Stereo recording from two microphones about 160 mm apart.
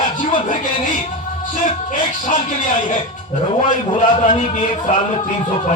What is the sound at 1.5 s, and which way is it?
Speech, 50° left (ahead or behind).